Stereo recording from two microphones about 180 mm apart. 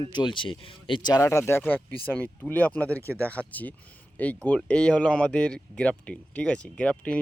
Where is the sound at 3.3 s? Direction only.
10° left (ahead or behind).